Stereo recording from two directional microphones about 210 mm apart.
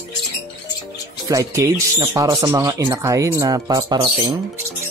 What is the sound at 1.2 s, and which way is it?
Speech, 15° right (ahead or behind).